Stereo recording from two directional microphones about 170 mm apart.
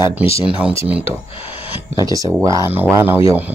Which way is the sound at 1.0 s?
35° left (ahead or behind).